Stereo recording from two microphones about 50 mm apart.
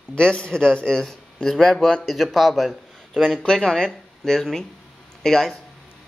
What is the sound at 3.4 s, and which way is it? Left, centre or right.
Speech, centre.